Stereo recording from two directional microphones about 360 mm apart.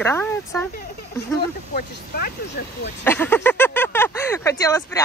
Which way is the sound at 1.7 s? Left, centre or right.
Left.